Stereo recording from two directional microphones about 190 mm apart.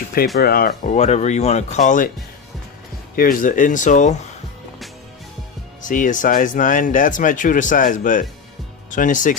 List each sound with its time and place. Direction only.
0.4 s speech: 55° left (ahead or behind)
0.9 s speech: 35° left (ahead or behind)
3.2 s speech: 45° left (ahead or behind)
5.9 s speech: 45° left (ahead or behind)